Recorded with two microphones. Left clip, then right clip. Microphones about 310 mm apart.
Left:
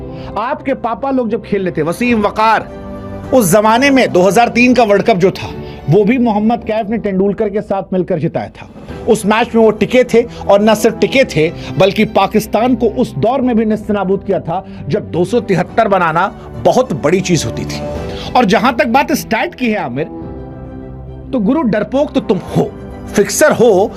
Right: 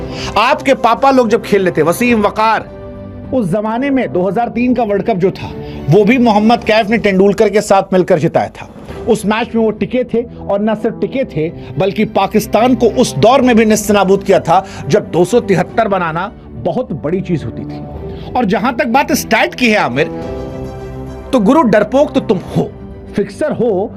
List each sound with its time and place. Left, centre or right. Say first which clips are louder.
0.3 s a man's voice: right 6 dB; right
1.5 s speech: right 3 dB; right; by 2.6 s centre
3.3 s speech: left 6 dB; left
3.6 s speech: left 6 dB; left; by 5.3 s centre
5.9 s a man's voice: right 2 dB; centre
9.0 s speech: left 2 dB; centre; by 10.2 s left
10.4 s speech: left 6 dB; left
11.8 s speech: left 3 dB; centre; by 14.5 s right
14.8 s speech: right 4 dB; right; by 16.3 s centre
16.9 s speech: left 5 dB; left
18.3 s speech: left 3 dB; centre; by 20.1 s right
21.3 s speech: right 5 dB; right; by 22.7 s centre
23.1 s speech: left 7 dB; left
23.6 s speech: left 5 dB; left